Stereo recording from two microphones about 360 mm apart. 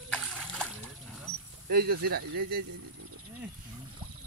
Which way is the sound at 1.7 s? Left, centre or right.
Right.